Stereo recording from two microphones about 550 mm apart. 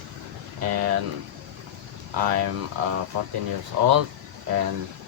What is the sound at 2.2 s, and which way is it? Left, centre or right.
Speech, right.